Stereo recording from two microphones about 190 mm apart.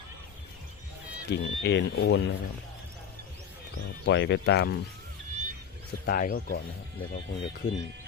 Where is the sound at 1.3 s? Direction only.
65° left (ahead or behind).